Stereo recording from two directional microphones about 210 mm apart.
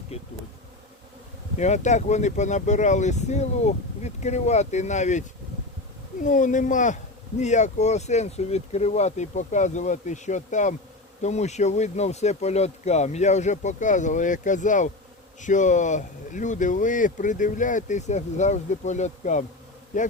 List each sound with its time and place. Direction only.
0.1 s bee: 30° left (ahead or behind)
1.5 s speech: 35° left (ahead or behind)
6.2 s speech: 35° left (ahead or behind)